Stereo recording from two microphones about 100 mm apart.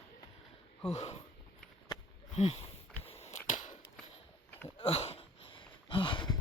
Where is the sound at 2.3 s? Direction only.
90° left.